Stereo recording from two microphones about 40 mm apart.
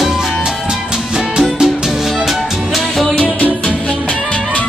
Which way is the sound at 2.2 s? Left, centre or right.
Centre.